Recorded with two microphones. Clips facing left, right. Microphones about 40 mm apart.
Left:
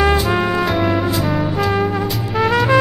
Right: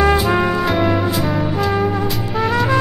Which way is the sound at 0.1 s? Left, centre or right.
Centre.